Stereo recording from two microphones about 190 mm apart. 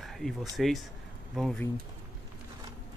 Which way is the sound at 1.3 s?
Centre (ahead or behind).